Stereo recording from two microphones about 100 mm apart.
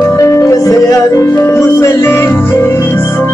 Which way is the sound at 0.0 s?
30° left (ahead or behind).